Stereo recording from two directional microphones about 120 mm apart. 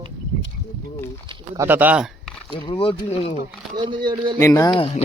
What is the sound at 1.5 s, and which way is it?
Speech, 15° right (ahead or behind).